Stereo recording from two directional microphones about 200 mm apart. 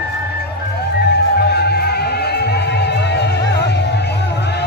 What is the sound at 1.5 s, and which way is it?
Music, 55° left (ahead or behind).